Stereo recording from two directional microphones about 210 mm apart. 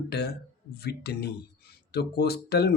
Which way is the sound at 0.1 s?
50° left (ahead or behind).